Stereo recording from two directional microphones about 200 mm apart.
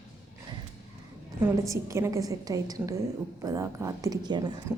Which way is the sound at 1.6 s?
15° right (ahead or behind).